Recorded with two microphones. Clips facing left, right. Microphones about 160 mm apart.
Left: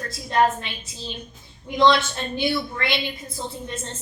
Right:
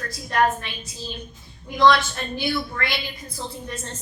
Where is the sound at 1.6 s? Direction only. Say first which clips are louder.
Even; 20° left (ahead or behind).